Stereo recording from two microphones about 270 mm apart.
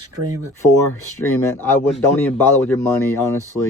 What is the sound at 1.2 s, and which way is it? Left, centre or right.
Speech, centre.